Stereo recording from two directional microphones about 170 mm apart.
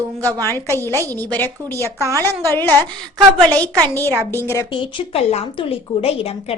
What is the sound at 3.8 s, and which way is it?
Speech, 15° left (ahead or behind).